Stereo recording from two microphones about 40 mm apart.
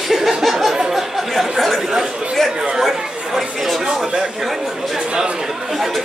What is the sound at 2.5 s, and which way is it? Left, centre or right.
Speech, centre.